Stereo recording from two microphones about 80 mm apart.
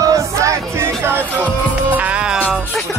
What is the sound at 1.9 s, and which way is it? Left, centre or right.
Music, centre.